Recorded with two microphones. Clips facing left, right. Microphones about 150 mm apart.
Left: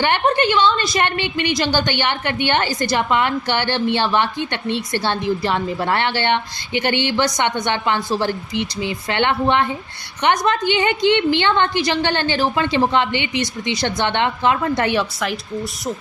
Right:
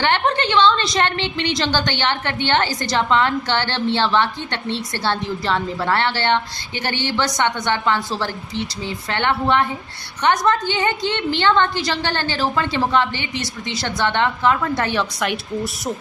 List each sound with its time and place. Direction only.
0.0 s a woman's voice: 10° left (ahead or behind)
15.2 s speech: centre (ahead or behind)